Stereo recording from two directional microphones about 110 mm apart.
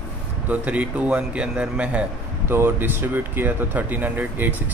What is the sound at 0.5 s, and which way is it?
A man's voice, 15° right (ahead or behind).